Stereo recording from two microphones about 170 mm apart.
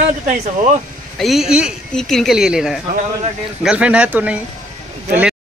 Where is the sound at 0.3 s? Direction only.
45° right (ahead or behind).